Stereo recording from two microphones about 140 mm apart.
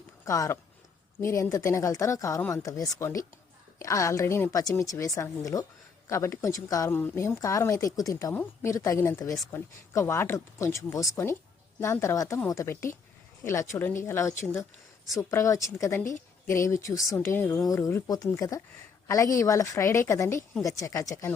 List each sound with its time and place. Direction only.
0.3 s a woman's voice: 20° left (ahead or behind)